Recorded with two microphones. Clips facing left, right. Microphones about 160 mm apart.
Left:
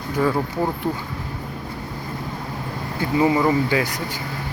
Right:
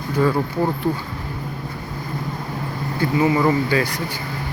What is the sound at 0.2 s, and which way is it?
Speech, centre (ahead or behind).